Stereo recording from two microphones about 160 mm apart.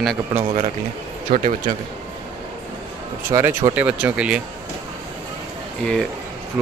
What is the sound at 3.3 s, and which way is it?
Speech, 15° right (ahead or behind).